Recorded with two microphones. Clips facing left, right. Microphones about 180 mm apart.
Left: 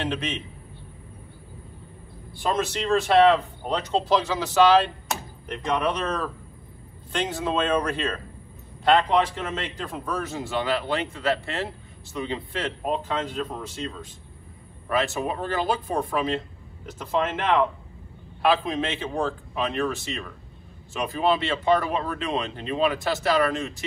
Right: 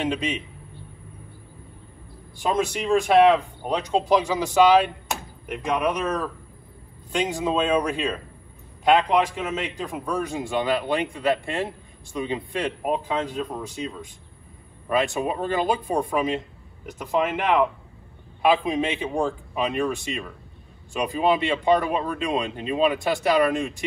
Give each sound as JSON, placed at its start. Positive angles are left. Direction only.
{"t": 0.0, "sound": "a man's voice", "side_deg": -15}
{"t": 2.4, "sound": "a man's voice", "side_deg": -15}